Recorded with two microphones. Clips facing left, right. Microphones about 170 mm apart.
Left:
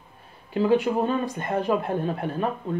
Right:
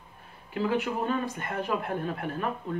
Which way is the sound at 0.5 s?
30° left (ahead or behind).